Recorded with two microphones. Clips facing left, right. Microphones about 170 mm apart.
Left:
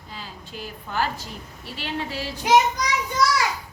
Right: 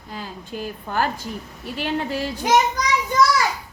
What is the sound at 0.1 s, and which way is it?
A woman's voice, 50° right (ahead or behind).